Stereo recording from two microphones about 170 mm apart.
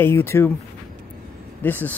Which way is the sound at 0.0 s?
15° left (ahead or behind).